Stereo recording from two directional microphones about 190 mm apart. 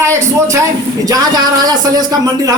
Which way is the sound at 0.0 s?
15° right (ahead or behind).